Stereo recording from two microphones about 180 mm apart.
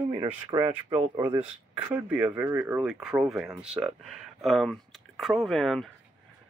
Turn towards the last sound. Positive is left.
turn(degrees=0)  # may be behind; listen again after turning